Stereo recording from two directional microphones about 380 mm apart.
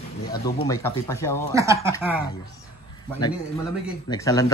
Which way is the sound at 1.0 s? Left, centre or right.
Centre.